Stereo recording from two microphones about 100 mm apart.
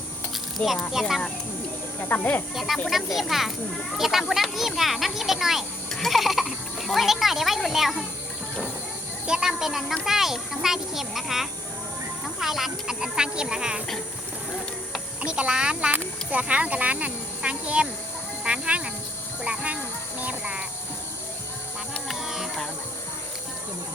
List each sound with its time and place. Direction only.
0.6 s a child's voice: centre (ahead or behind)
2.0 s speech: 15° left (ahead or behind)
2.6 s a child's voice: centre (ahead or behind)
9.2 s a child's voice: 5° right (ahead or behind)
15.2 s speech: 10° right (ahead or behind)
19.5 s music: 15° right (ahead or behind)
22.1 s music: 5° right (ahead or behind)